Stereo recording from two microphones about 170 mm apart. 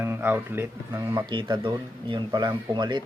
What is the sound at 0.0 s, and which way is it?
Speech, 10° right (ahead or behind).